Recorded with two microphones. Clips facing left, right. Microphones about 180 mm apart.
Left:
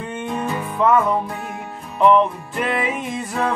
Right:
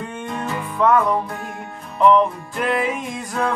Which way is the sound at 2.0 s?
Centre (ahead or behind).